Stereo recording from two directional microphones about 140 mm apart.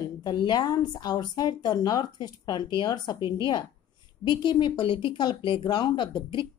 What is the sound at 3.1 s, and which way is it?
Speech, 20° right (ahead or behind).